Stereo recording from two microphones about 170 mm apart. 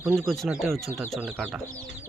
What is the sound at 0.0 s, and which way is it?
Speech, centre (ahead or behind).